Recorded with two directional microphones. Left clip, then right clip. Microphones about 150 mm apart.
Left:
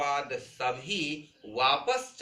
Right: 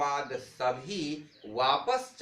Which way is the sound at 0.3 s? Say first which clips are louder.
Right 1 dB; 50° right (ahead or behind).